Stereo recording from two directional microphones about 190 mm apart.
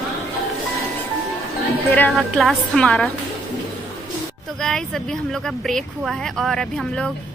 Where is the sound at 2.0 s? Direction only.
5° left (ahead or behind).